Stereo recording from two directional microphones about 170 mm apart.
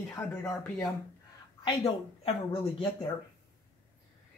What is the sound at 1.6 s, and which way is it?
Speech, 30° left (ahead or behind).